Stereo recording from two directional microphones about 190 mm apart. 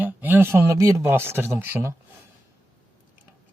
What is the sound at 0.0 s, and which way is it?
Speech, 10° right (ahead or behind).